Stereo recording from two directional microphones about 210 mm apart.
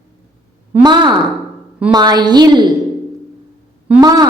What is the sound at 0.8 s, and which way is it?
A woman's voice, 20° right (ahead or behind).